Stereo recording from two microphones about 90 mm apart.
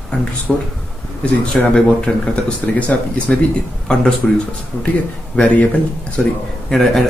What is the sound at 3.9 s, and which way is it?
Speech, 10° left (ahead or behind).